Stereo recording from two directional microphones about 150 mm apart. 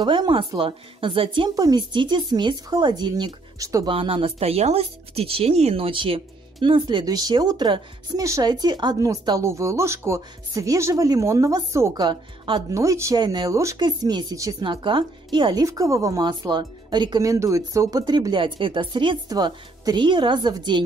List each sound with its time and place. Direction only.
0.0 s a woman's voice: 30° right (ahead or behind)
3.9 s speech: 35° right (ahead or behind)